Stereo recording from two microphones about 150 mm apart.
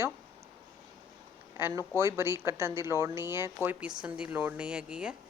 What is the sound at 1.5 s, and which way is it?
A woman's voice, 15° right (ahead or behind).